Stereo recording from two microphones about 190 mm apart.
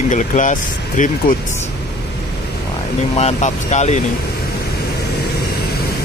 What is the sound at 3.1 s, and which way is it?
Speech, 35° left (ahead or behind).